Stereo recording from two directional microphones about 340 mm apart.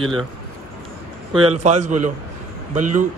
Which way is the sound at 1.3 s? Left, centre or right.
Centre.